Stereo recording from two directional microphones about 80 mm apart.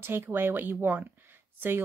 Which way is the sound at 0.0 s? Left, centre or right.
Right.